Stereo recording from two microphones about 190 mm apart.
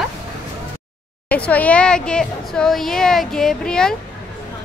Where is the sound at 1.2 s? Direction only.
5° left (ahead or behind).